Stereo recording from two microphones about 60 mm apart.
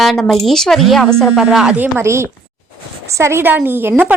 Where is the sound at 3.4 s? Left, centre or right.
Right.